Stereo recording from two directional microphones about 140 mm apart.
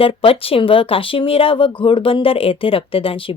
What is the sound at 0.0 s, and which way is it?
Speech, 40° left (ahead or behind).